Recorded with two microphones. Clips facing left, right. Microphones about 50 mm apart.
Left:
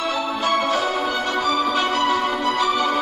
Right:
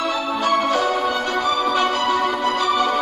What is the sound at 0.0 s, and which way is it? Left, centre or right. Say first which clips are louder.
Music: right 1 dB; centre.